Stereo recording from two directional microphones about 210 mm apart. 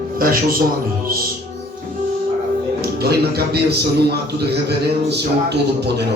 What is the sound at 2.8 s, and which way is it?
A man's voice, 50° right (ahead or behind).